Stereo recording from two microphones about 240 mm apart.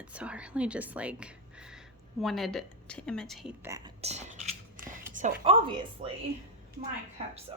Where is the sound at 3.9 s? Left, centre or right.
Right.